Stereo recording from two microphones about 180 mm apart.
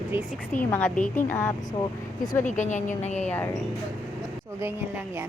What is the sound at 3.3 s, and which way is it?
Speech, 10° left (ahead or behind).